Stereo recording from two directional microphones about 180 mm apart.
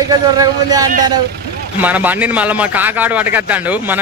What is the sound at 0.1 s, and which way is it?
Speech, 20° right (ahead or behind).